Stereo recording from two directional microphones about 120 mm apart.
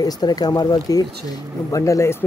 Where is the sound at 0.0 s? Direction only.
35° left (ahead or behind).